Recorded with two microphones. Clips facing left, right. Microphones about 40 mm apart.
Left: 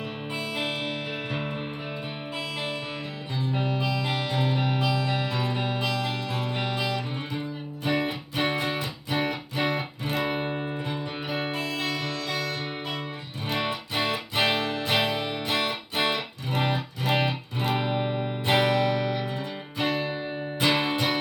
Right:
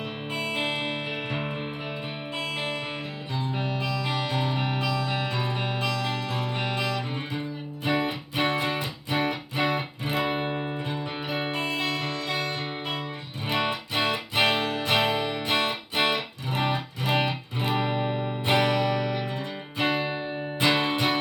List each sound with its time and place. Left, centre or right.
0.3 s music: centre
3.6 s music: centre
10.5 s music: right
10.8 s music: centre
11.9 s music: right
16.0 s music: centre
17.8 s music: right
18.2 s music: centre